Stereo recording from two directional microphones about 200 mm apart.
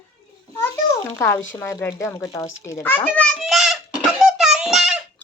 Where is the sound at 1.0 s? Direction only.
15° left (ahead or behind).